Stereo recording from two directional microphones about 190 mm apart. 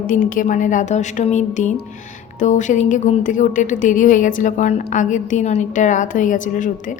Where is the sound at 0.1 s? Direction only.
45° left (ahead or behind).